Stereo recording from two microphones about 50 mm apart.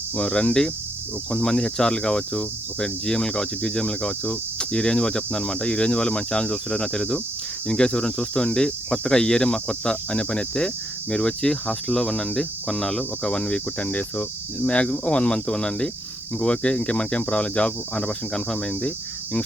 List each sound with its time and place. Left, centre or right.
0.2 s speech: left
13.7 s speech: left
18.7 s cricket: left